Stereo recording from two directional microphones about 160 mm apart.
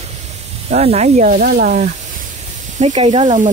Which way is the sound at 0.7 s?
40° right (ahead or behind).